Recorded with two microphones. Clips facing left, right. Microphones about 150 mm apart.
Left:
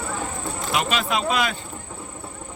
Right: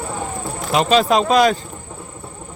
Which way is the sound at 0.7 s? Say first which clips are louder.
Right 9 dB; 30° right (ahead or behind).